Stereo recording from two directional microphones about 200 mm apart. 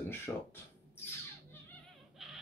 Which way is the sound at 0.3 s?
5° left (ahead or behind).